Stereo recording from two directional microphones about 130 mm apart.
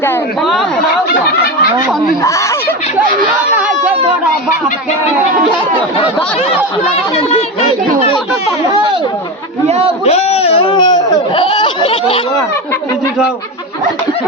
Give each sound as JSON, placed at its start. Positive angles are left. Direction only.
{"t": 7.2, "sound": "speech", "side_deg": 50}
{"t": 9.6, "sound": "a man's voice", "side_deg": -55}
{"t": 10.0, "sound": "speech", "side_deg": 55}